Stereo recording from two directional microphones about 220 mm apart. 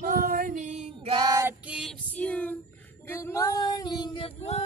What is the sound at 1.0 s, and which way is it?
Female singing, 20° right (ahead or behind).